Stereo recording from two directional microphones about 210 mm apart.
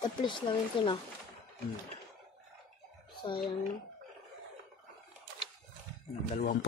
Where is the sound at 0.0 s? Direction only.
20° left (ahead or behind).